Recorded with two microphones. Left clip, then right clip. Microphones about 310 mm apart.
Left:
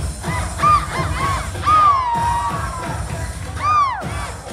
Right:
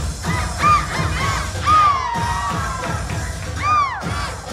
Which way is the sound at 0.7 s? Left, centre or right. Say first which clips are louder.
Left 1 dB; centre.